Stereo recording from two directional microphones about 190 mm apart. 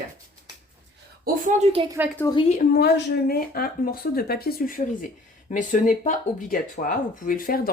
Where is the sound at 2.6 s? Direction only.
60° left (ahead or behind).